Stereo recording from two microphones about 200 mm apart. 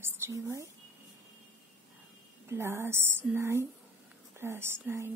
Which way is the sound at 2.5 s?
15° right (ahead or behind).